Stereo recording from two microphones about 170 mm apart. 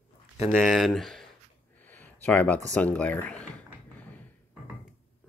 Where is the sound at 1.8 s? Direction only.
10° left (ahead or behind).